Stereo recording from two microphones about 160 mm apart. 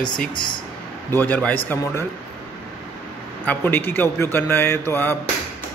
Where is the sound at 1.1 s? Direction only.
10° left (ahead or behind).